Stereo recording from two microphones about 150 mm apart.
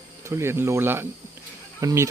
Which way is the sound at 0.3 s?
15° right (ahead or behind).